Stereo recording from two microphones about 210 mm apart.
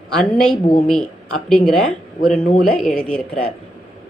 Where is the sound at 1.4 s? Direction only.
5° left (ahead or behind).